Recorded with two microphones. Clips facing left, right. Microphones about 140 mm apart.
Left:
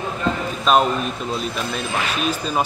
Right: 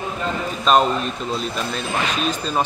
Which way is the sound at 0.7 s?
Centre (ahead or behind).